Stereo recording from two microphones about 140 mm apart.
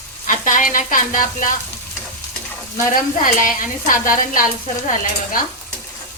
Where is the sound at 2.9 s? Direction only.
75° left (ahead or behind).